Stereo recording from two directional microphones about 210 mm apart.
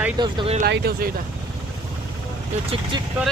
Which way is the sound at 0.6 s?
45° right (ahead or behind).